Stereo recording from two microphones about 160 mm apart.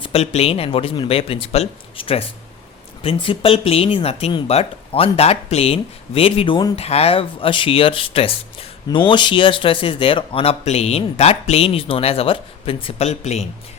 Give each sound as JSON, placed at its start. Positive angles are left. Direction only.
{"t": 0.0, "sound": "speech", "side_deg": 40}
{"t": 6.7, "sound": "speech", "side_deg": 40}